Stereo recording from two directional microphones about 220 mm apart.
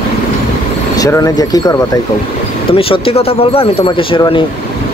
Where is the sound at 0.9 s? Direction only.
15° left (ahead or behind).